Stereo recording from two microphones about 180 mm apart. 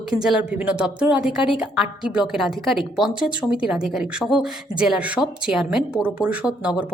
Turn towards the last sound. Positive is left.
turn(degrees=-5)  # may be behind; listen again after turning